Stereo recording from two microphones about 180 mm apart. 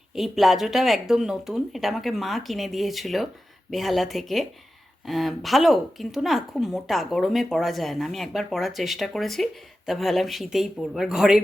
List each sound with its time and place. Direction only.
0.1 s speech: centre (ahead or behind)